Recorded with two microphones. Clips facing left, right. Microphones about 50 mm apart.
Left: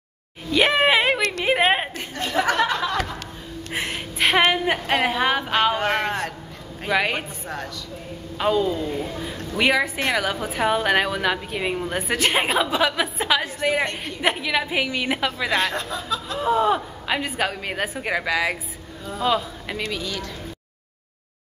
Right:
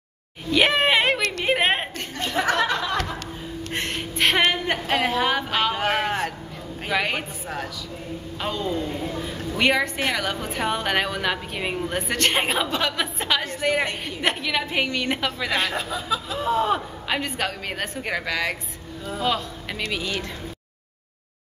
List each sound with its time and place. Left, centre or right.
0.5 s a sound: centre
2.7 s music: centre
3.7 s gasp: centre
4.4 s a sound: centre
4.8 s a woman's voice: centre
5.8 s a sound: centre
6.9 s a woman's voice: centre
17.2 s a woman's voice: centre
19.9 s speech: centre